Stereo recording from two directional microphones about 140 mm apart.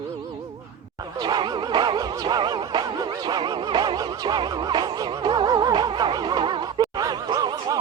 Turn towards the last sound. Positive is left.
turn(degrees=-30)  # may be behind; listen again after turning